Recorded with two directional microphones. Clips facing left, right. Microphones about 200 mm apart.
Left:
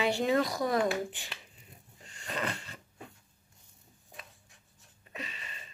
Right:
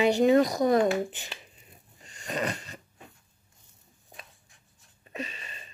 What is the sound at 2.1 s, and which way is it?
Wheeze, 15° right (ahead or behind).